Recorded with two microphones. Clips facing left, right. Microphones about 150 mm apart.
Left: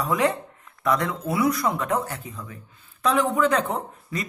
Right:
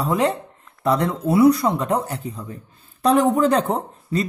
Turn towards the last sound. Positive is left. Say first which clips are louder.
# right 6 dB
turn(degrees=-30)  # may be behind; listen again after turning